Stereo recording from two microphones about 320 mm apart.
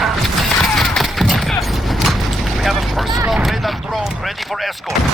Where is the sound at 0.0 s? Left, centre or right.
Centre.